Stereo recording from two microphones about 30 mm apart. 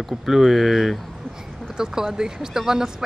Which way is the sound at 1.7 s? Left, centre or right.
Centre.